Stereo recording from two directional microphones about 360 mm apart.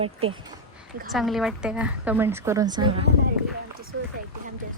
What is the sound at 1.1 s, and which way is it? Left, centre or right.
A woman's voice, centre.